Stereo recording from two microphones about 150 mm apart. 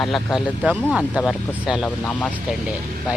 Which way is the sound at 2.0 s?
10° left (ahead or behind).